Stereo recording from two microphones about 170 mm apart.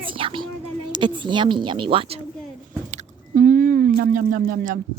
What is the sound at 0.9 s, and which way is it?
Speech, 30° right (ahead or behind).